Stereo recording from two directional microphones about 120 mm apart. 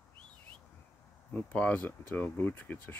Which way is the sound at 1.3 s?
10° left (ahead or behind).